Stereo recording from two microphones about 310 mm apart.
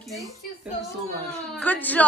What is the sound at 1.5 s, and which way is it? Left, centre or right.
Speech, centre.